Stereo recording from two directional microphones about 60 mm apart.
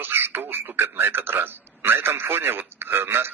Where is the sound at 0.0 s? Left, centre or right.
Right.